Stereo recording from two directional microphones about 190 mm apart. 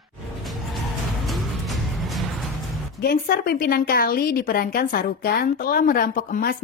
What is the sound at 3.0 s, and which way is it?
A woman's voice, 55° left (ahead or behind).